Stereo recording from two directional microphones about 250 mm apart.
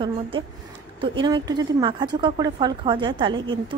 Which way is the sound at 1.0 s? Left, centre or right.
Centre.